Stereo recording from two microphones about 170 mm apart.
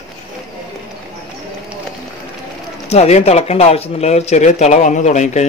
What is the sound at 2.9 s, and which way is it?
Speech, 40° left (ahead or behind).